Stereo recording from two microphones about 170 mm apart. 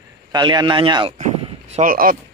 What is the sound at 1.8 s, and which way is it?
Speech, 55° right (ahead or behind).